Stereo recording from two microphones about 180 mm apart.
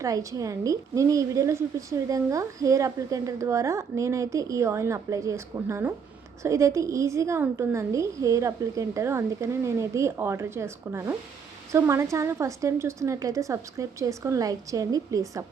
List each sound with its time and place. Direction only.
0.0 s a woman's voice: 15° right (ahead or behind)